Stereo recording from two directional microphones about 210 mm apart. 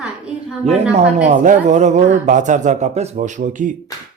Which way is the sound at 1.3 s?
35° right (ahead or behind).